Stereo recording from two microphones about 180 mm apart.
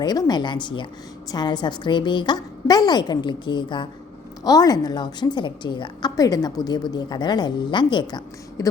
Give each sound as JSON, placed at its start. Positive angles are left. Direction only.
{"t": 0.0, "sound": "a woman's voice", "side_deg": 20}